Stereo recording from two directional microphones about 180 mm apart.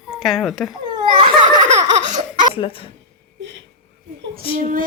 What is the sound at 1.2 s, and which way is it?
Laughter, 25° right (ahead or behind).